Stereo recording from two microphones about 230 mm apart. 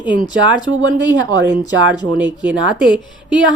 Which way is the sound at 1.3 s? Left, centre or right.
Centre.